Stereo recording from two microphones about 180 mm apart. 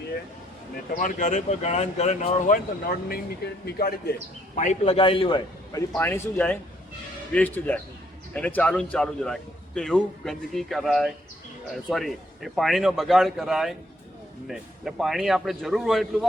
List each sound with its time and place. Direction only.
0.9 s speech: 45° left (ahead or behind)
3.1 s speech: 65° left (ahead or behind)
4.5 s a man's voice: 45° left (ahead or behind)
4.9 s speech: 30° left (ahead or behind)
6.0 s a man's voice: 10° left (ahead or behind)